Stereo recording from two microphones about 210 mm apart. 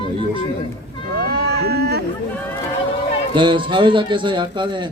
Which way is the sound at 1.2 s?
50° right (ahead or behind).